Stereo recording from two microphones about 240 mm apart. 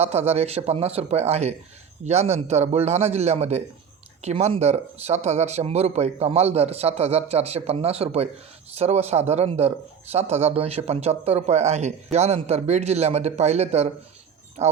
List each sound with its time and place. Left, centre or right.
0.0 s a man's voice: right